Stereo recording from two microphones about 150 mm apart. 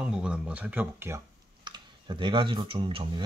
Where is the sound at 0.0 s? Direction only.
5° right (ahead or behind).